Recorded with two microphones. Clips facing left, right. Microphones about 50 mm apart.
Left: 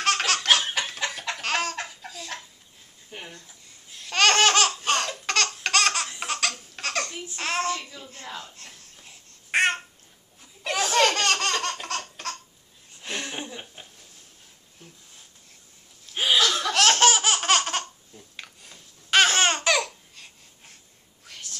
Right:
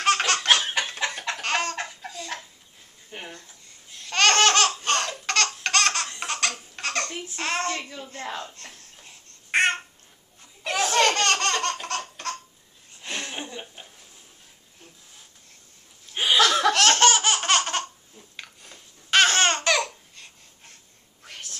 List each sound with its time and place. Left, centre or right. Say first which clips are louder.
0.0 s laughter: right 2 dB; centre
0.9 s chicken: right 2 dB; centre
1.4 s laughter: right 1 dB; centre
2.0 s a sound: right 2 dB; centre
3.4 s laughter: even; centre
7.3 s a sound: left 1 dB; centre
8.2 s a sound: right 5 dB; right
9.0 s babbling: right 1 dB; centre
10.4 s laughter: right 1 dB; centre
13.0 s a sound: even; centre
16.1 s chuckle: even; centre
16.3 s laughter: right 6 dB; right
16.7 s laughter: right 1 dB; centre
21.3 s whispering: right 2 dB; right